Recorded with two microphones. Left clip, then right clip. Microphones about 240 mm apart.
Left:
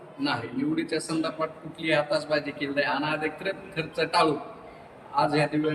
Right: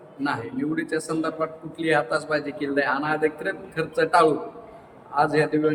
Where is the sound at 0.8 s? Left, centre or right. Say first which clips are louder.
Right 4 dB; centre.